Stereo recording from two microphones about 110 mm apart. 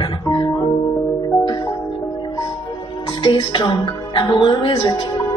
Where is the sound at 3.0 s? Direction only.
45° left (ahead or behind).